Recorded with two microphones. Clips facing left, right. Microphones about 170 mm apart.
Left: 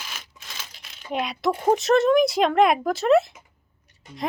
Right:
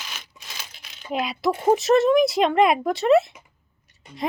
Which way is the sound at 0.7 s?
Centre (ahead or behind).